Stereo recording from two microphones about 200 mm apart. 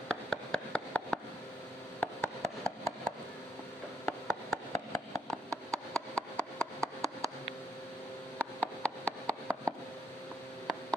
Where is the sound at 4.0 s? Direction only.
10° left (ahead or behind).